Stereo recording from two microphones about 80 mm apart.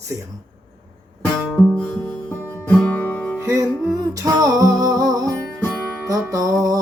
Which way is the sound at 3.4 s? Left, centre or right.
Right.